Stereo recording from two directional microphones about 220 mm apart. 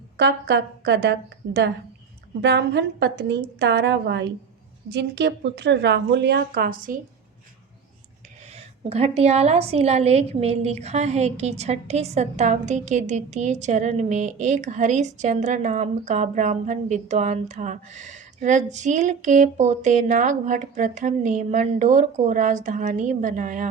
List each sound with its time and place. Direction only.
0.2 s a woman's voice: 50° right (ahead or behind)
8.5 s a woman's voice: 30° right (ahead or behind)